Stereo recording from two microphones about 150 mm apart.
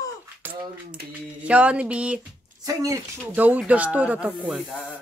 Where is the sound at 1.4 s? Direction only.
10° right (ahead or behind).